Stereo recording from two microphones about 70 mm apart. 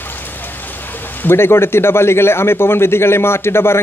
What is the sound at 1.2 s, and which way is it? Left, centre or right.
A man's voice, left.